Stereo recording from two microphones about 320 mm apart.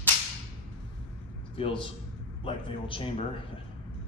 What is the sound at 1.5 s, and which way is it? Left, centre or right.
Speech, centre.